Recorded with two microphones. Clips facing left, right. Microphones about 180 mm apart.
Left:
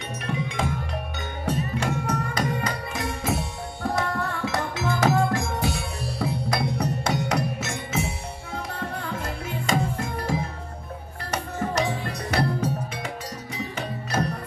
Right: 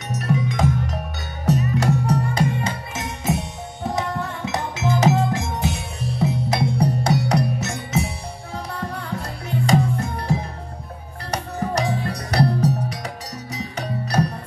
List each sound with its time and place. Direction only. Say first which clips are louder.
0.1 s music: right 8 dB; 40° right (ahead or behind)
11.3 s music: right 2 dB; 35° right (ahead or behind)